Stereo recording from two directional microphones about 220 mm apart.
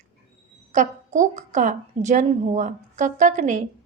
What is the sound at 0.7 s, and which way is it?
A woman's voice, 35° right (ahead or behind).